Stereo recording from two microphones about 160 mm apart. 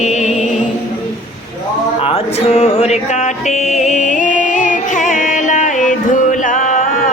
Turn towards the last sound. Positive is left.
turn(degrees=55)  # may be behind; listen again after turning